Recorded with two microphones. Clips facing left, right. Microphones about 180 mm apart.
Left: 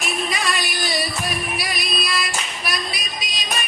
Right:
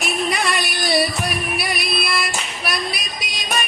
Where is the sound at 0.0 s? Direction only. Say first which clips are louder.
Right 3 dB; 65° right (ahead or behind).